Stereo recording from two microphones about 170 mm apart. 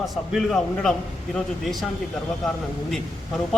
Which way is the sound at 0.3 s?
5° left (ahead or behind).